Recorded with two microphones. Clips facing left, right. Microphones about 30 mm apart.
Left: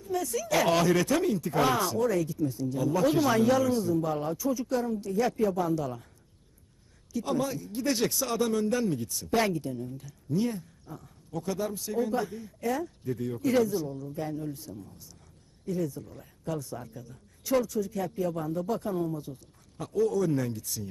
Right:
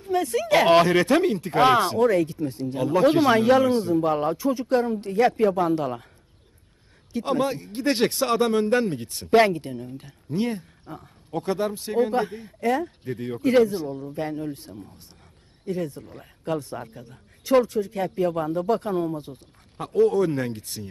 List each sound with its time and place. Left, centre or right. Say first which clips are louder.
0.0 s speech: right 7 dB; right
7.1 s speech: right 5 dB; right